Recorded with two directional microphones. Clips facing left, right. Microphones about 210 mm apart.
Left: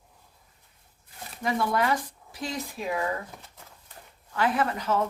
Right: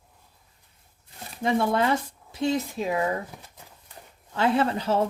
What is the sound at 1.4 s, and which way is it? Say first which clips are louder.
Speech: right 3 dB; 25° right (ahead or behind).